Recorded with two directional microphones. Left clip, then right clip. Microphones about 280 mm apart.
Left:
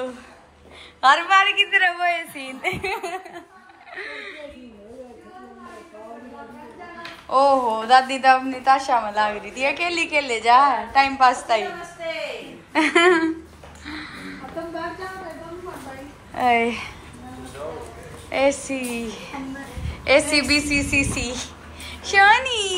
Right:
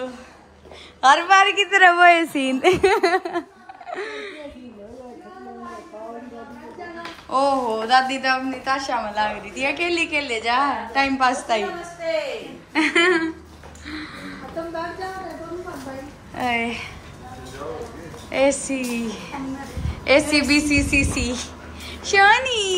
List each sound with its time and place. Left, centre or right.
1.0 s a woman's voice: centre
2.9 s a woman's voice: right
3.9 s speech: centre
7.2 s a woman's voice: centre
12.7 s a woman's voice: centre
13.8 s music: centre
16.3 s a woman's voice: centre
18.3 s speech: centre